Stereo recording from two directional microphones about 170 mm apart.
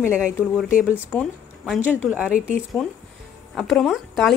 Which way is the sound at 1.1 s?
Centre (ahead or behind).